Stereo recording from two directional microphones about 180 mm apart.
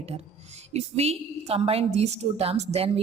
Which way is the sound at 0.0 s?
35° right (ahead or behind).